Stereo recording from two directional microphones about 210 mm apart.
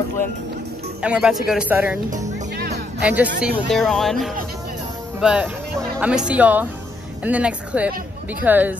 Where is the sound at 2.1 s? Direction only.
35° right (ahead or behind).